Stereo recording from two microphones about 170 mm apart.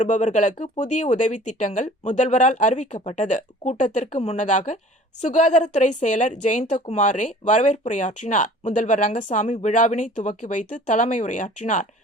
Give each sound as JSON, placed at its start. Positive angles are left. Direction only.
{"t": 0.0, "sound": "a woman's voice", "side_deg": 45}